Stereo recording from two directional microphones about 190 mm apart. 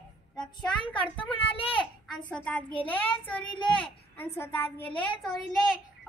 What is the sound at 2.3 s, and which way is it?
Speech, 5° left (ahead or behind).